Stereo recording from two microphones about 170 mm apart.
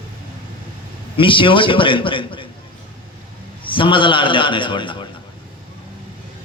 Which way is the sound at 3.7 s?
30° left (ahead or behind).